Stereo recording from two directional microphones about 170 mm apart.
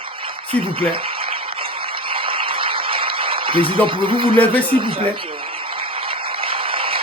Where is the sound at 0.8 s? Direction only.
30° right (ahead or behind).